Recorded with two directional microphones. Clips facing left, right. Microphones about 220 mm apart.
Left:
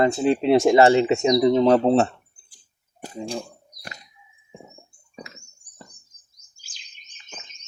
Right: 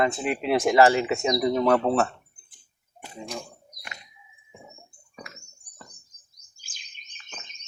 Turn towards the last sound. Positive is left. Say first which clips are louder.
# right 2 dB
turn(degrees=-80)